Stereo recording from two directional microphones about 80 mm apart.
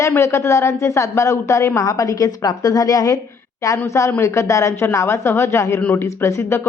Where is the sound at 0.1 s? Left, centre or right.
Left.